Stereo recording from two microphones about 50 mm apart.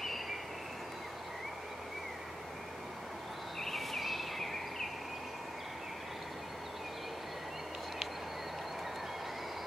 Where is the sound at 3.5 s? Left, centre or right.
Centre.